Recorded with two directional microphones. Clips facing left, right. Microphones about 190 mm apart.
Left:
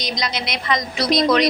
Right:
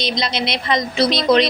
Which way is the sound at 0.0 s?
30° right (ahead or behind).